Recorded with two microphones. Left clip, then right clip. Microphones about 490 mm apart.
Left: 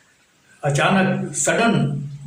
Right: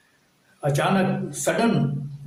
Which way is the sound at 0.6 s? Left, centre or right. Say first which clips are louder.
Left 4 dB; right.